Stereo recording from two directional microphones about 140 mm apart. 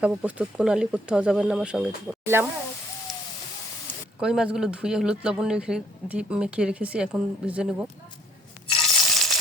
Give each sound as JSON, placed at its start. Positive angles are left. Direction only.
{"t": 0.0, "sound": "speech", "side_deg": -10}
{"t": 2.2, "sound": "speech", "side_deg": -15}
{"t": 4.2, "sound": "speech", "side_deg": -5}
{"t": 8.7, "sound": "a sound", "side_deg": 5}